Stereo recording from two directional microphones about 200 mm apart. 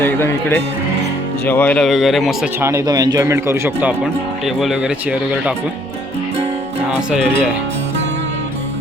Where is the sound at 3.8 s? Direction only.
Centre (ahead or behind).